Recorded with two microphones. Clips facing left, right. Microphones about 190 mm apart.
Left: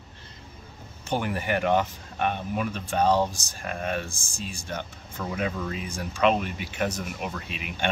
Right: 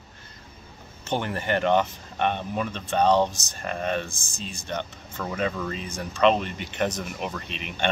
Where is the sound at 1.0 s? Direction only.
10° left (ahead or behind).